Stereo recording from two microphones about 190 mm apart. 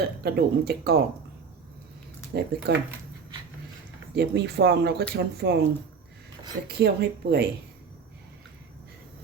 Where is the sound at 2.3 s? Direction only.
55° right (ahead or behind).